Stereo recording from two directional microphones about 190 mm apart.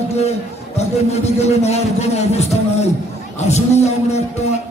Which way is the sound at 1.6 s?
35° left (ahead or behind).